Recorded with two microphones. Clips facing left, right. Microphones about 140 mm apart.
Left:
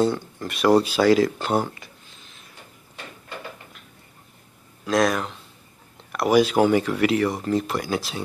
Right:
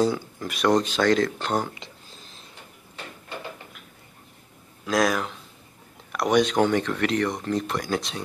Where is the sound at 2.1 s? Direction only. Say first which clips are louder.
Right 2 dB; 35° right (ahead or behind).